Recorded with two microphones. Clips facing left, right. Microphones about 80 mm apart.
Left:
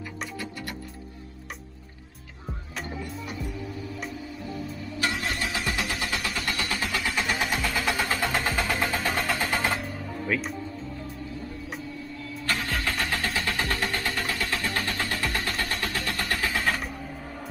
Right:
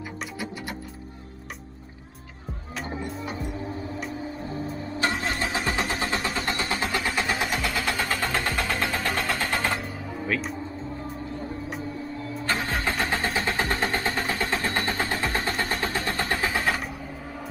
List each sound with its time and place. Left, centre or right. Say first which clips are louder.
3.3 s music: right 3 dB; right
5.2 s vehicle: right 2 dB; right
7.1 s vehicle: left 1 dB; centre
10.2 s music: even; centre
12.2 s music: right 2 dB; right
13.0 s a sound: right 3 dB; right
16.4 s vehicle: right 1 dB; centre